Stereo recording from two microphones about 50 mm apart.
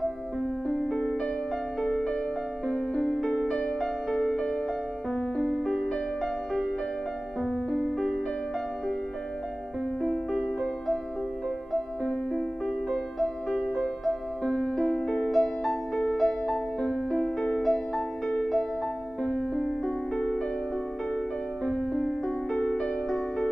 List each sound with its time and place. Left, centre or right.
0.8 s music: centre
10.0 s music: centre
12.0 s music: centre
21.6 s music: centre